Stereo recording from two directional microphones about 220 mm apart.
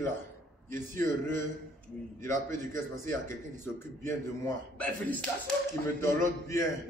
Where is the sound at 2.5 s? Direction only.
10° left (ahead or behind).